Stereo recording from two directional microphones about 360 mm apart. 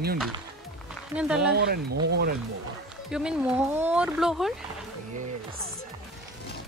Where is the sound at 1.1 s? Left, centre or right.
Centre.